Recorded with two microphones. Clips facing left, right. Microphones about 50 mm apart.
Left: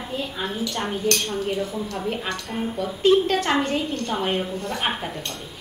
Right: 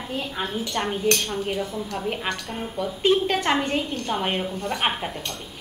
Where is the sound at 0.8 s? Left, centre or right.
Right.